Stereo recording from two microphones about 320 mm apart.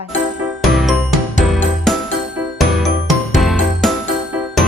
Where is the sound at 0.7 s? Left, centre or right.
Centre.